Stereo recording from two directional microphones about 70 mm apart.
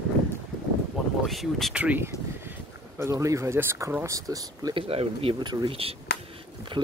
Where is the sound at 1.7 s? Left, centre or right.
Centre.